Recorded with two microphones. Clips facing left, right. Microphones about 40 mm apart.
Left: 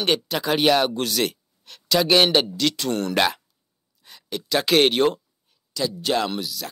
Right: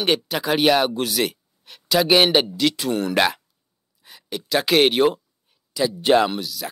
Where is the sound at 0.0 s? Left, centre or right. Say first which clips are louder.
Right 1 dB; centre.